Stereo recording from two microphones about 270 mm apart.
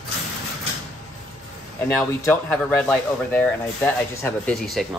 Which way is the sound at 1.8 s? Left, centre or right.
Centre.